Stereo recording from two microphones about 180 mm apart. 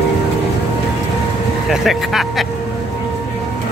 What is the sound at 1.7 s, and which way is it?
Vehicle, centre (ahead or behind).